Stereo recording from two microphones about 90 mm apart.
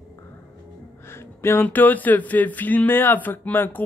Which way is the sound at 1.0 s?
30° left (ahead or behind).